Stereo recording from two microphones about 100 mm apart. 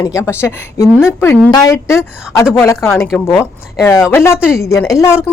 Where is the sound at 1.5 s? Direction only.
40° left (ahead or behind).